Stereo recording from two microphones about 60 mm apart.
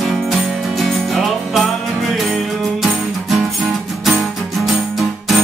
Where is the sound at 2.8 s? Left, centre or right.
Centre.